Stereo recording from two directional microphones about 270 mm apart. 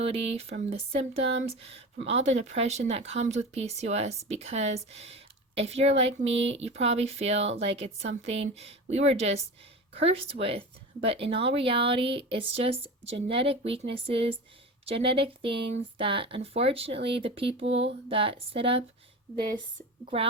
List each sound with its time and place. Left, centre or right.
0.0 s speech: right